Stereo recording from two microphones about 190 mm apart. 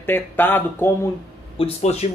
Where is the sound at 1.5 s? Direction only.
30° left (ahead or behind).